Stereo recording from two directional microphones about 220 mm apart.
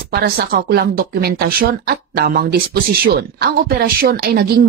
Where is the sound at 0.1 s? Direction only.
45° right (ahead or behind).